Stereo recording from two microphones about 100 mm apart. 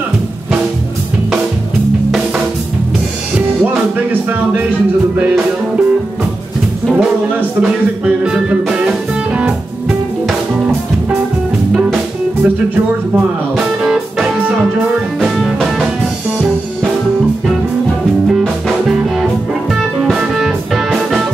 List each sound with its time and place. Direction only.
3.3 s music: 15° right (ahead or behind)
6.9 s speech: 10° right (ahead or behind)
13.8 s music: centre (ahead or behind)
20.2 s music: 5° right (ahead or behind)